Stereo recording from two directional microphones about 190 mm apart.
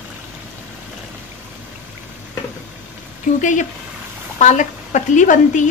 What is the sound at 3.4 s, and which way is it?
A woman's voice, 40° left (ahead or behind).